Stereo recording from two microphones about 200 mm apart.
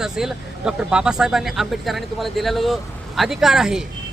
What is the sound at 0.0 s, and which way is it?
Speech, centre (ahead or behind).